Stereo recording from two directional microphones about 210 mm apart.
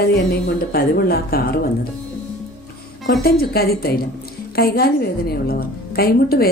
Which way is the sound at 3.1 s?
50° left (ahead or behind).